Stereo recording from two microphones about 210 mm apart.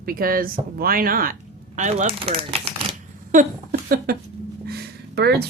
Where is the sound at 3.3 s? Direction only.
45° right (ahead or behind).